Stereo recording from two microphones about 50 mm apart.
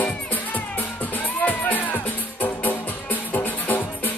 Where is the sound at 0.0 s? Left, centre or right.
Left.